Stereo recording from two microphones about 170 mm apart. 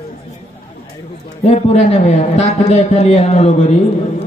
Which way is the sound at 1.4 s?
40° left (ahead or behind).